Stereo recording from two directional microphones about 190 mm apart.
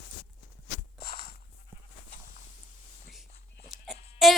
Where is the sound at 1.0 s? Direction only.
55° left (ahead or behind).